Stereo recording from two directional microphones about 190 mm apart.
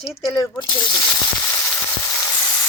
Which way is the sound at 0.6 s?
20° left (ahead or behind).